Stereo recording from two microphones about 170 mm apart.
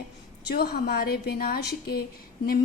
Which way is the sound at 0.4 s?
65° left (ahead or behind).